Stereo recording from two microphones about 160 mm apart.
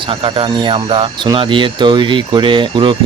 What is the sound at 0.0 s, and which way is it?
Speech, 30° right (ahead or behind).